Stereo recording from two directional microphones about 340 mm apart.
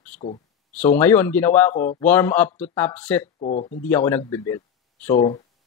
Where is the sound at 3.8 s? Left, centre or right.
Centre.